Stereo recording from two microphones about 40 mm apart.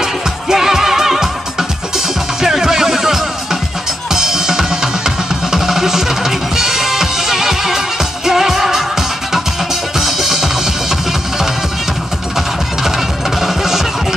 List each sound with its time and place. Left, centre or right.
0.0 s music: centre
4.1 s drum kit: centre
9.9 s music: centre
13.4 s music: centre